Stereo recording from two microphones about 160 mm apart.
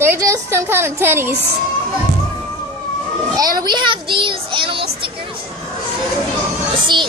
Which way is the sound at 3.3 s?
25° right (ahead or behind).